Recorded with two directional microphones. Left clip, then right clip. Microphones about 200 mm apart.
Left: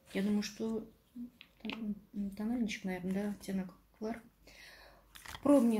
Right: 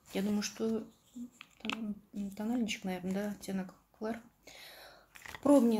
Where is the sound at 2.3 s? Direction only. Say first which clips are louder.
Right 2 dB; 10° right (ahead or behind).